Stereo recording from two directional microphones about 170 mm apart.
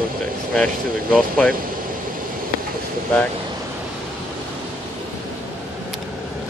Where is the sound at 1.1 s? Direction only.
5° left (ahead or behind).